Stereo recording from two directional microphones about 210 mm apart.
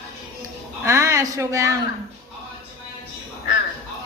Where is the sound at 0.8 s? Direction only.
15° right (ahead or behind).